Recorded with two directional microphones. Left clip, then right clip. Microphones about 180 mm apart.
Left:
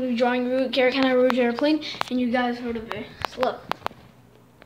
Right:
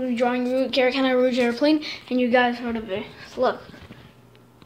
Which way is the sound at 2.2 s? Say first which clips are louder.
Right 7 dB; 35° right (ahead or behind).